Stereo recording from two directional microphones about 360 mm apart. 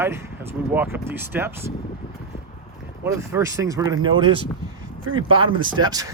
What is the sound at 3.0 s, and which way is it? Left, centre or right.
Speech, centre.